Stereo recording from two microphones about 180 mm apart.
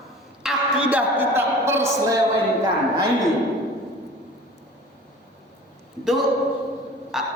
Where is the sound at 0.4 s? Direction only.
5° right (ahead or behind).